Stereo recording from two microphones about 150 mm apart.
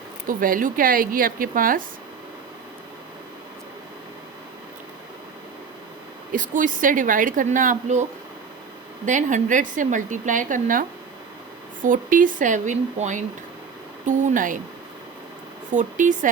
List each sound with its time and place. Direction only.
0.3 s a woman's voice: 65° right (ahead or behind)
6.3 s a woman's voice: 60° right (ahead or behind)
9.0 s a woman's voice: 55° right (ahead or behind)
15.7 s a woman's voice: 55° right (ahead or behind)